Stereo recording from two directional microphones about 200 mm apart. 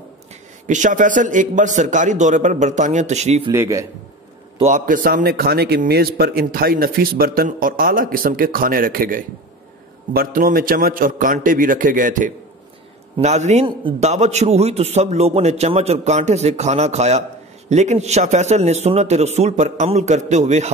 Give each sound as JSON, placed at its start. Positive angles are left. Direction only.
{"t": 0.7, "sound": "a man's voice", "side_deg": -40}
{"t": 3.5, "sound": "a man's voice", "side_deg": -15}
{"t": 4.6, "sound": "a man's voice", "side_deg": -40}